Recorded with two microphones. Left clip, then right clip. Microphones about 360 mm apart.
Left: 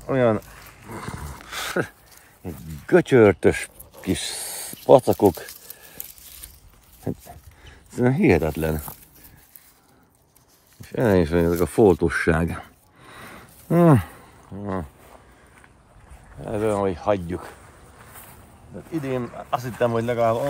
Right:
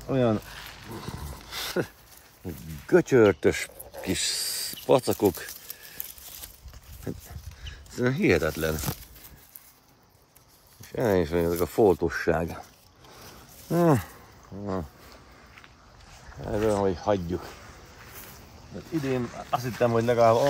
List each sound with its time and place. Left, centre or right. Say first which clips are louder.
0.0 s speech: left 5 dB; left
0.9 s a sound: left 8 dB; left
2.9 s speech: left 4 dB; left
7.1 s speech: left 6 dB; centre
10.9 s speech: left 5 dB; left
13.7 s speech: left 5 dB; left
16.4 s speech: left 2 dB; left
18.9 s speech: left 2 dB; centre